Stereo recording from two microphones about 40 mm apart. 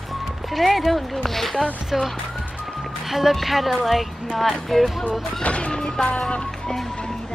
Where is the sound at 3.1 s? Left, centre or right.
Centre.